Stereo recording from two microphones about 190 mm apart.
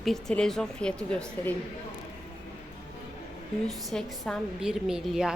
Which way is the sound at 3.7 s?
Centre (ahead or behind).